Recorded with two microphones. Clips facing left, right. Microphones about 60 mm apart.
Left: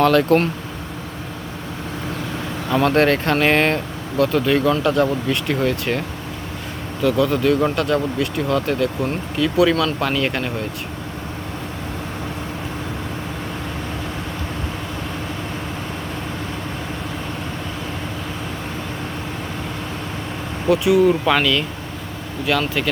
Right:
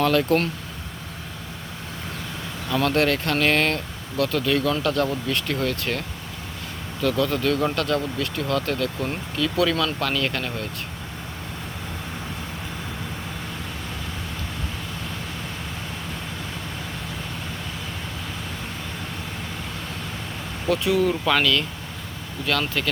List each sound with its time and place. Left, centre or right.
0.0 s speech: left
2.6 s speech: left
7.0 s speech: centre
20.7 s speech: centre